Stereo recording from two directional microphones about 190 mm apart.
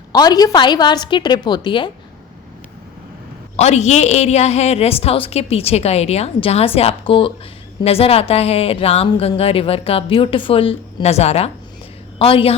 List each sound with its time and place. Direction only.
0.1 s a woman's voice: 20° left (ahead or behind)
3.6 s a woman's voice: 35° left (ahead or behind)